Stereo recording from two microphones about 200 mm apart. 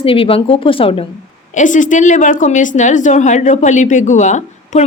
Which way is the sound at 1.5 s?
40° left (ahead or behind).